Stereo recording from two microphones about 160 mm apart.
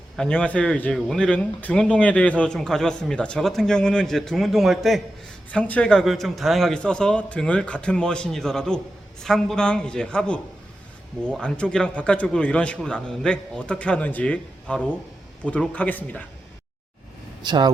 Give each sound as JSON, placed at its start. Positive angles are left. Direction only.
{"t": 0.2, "sound": "a man's voice", "side_deg": 5}
{"t": 17.4, "sound": "speech", "side_deg": -25}